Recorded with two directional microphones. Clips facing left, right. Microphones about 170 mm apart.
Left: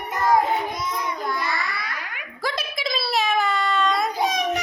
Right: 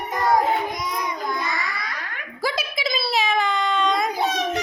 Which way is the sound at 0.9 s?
20° right (ahead or behind).